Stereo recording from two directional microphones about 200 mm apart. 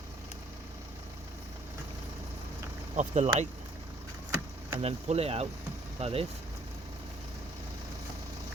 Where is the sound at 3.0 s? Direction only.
35° right (ahead or behind).